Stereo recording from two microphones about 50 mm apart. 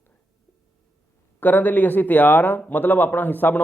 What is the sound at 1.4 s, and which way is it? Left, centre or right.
Speech, left.